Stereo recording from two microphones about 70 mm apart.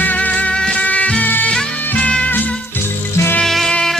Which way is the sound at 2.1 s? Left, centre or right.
Centre.